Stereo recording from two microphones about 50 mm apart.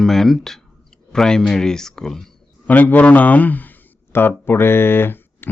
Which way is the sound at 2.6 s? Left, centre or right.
Left.